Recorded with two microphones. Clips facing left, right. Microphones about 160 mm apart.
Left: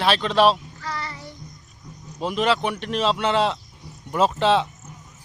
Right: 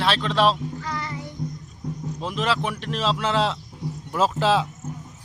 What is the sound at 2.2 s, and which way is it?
A man's voice, centre (ahead or behind).